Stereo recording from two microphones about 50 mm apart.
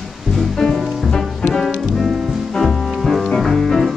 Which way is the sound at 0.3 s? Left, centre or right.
Centre.